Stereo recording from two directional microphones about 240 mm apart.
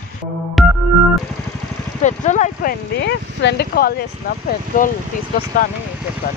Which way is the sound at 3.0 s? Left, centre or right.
Left.